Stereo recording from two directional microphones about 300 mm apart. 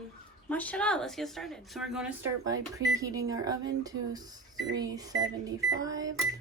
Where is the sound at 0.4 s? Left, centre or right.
Centre.